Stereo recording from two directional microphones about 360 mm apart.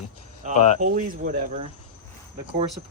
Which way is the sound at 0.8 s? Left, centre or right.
Right.